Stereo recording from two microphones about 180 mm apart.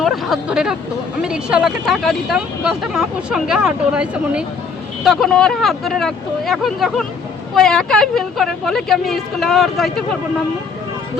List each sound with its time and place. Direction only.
0.0 s speech: centre (ahead or behind)